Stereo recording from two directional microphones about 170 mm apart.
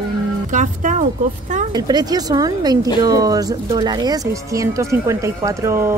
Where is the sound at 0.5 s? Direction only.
45° right (ahead or behind).